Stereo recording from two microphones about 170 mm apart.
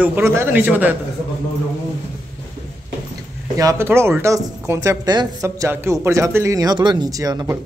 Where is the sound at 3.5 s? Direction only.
15° right (ahead or behind).